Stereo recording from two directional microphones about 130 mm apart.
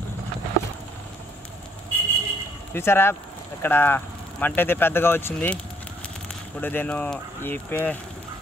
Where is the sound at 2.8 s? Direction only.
20° left (ahead or behind).